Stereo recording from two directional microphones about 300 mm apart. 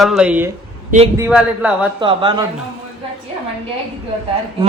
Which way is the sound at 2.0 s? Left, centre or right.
Centre.